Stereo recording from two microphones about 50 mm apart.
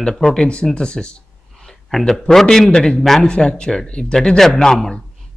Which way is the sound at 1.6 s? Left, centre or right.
Centre.